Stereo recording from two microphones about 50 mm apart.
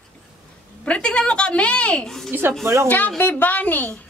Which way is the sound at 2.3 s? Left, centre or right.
Right.